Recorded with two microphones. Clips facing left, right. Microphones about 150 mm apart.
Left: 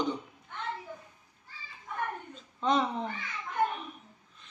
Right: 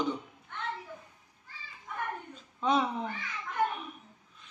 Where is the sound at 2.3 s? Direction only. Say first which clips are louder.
Even; 5° right (ahead or behind).